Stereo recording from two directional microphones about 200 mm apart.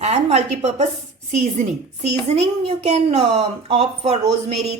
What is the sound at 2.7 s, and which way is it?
A woman's voice, 30° right (ahead or behind).